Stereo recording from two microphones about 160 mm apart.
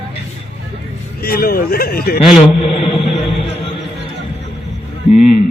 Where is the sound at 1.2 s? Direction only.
70° left (ahead or behind).